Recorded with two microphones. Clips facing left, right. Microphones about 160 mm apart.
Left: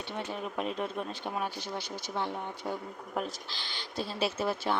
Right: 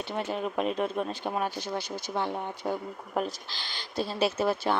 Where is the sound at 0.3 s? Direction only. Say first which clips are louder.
Right 6 dB; 90° right.